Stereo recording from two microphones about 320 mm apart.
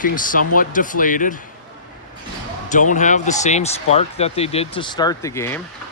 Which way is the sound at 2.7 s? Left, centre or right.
Left.